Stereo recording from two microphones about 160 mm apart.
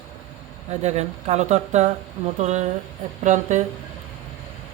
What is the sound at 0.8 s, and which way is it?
Speech, 45° right (ahead or behind).